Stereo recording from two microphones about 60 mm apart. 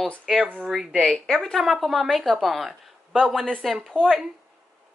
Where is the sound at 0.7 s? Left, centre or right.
Centre.